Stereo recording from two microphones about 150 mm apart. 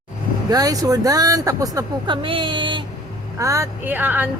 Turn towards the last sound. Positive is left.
turn(degrees=-10)  # may be behind; listen again after turning